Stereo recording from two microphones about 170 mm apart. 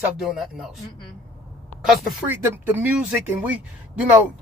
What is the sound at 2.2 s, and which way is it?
Speech, 15° right (ahead or behind).